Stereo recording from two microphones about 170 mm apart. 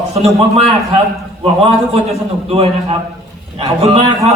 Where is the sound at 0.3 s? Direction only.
40° right (ahead or behind).